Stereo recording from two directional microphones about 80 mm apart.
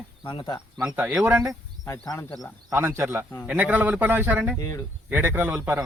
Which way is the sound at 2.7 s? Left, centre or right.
Right.